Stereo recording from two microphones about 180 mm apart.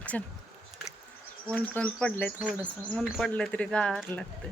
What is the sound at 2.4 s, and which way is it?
Speech, 10° right (ahead or behind).